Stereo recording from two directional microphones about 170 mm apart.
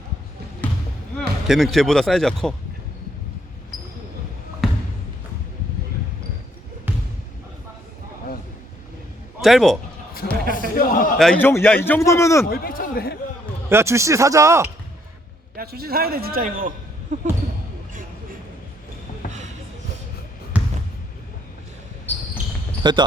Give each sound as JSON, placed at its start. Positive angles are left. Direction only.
{"t": 0.6, "sound": "basketball bounce", "side_deg": 10}
{"t": 1.5, "sound": "speech", "side_deg": 0}
{"t": 4.6, "sound": "basketball bounce", "side_deg": 0}
{"t": 9.4, "sound": "speech", "side_deg": 0}
{"t": 10.8, "sound": "a man's voice", "side_deg": 55}
{"t": 11.2, "sound": "a man's voice", "side_deg": 5}
{"t": 12.5, "sound": "a sound", "side_deg": 55}
{"t": 13.7, "sound": "speech", "side_deg": -15}
{"t": 15.5, "sound": "a man's voice", "side_deg": -65}
{"t": 17.1, "sound": "basketball bounce", "side_deg": -45}
{"t": 19.2, "sound": "basketball bounce", "side_deg": 55}
{"t": 20.5, "sound": "basketball bounce", "side_deg": -10}
{"t": 22.8, "sound": "speech", "side_deg": -25}